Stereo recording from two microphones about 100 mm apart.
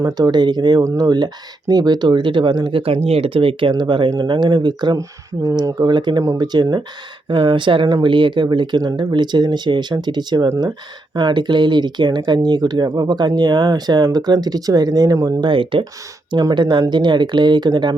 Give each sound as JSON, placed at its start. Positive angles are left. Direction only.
{"t": 0.0, "sound": "speech", "side_deg": -45}
{"t": 7.3, "sound": "speech", "side_deg": -60}
{"t": 15.4, "sound": "speech", "side_deg": -55}
{"t": 16.3, "sound": "speech", "side_deg": -45}